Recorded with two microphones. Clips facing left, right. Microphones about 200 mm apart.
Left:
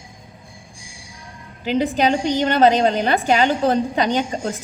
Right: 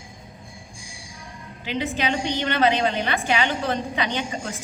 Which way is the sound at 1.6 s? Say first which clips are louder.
Left 8 dB; 40° left (ahead or behind).